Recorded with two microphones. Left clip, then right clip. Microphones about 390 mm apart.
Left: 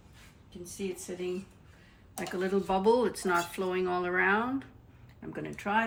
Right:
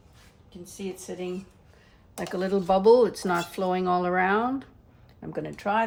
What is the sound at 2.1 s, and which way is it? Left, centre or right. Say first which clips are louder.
Speech: right 4 dB; right.